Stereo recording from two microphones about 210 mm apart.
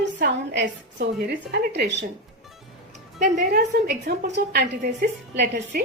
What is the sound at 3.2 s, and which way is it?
A woman's voice, 45° right (ahead or behind).